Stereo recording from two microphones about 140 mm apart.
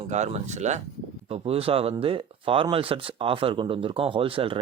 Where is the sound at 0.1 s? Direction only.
55° right (ahead or behind).